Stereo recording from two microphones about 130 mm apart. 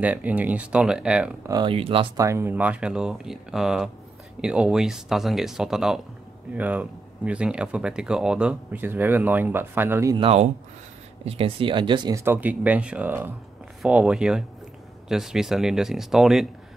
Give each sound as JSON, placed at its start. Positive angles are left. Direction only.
{"t": 0.0, "sound": "speech", "side_deg": -10}
{"t": 1.5, "sound": "speech", "side_deg": -40}
{"t": 2.1, "sound": "speech", "side_deg": -20}
{"t": 10.1, "sound": "speech", "side_deg": -50}
{"t": 12.1, "sound": "speech", "side_deg": -20}